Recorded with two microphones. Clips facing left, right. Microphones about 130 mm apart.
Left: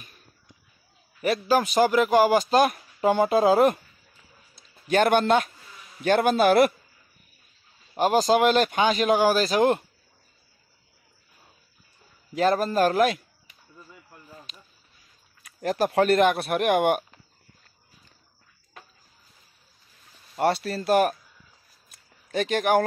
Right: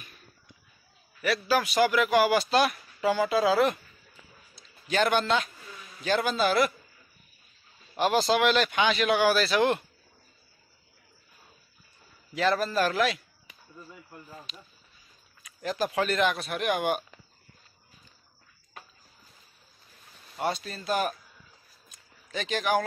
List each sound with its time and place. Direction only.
1.2 s a man's voice: 45° left (ahead or behind)
7.9 s speech: 40° left (ahead or behind)
12.4 s a man's voice: 45° left (ahead or behind)
15.4 s speech: 55° left (ahead or behind)
20.3 s speech: 65° left (ahead or behind)
21.8 s a sound: 55° left (ahead or behind)